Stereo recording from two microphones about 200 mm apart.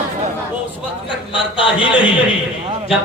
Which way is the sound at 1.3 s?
25° left (ahead or behind).